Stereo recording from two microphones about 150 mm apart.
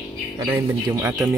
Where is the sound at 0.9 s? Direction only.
15° right (ahead or behind).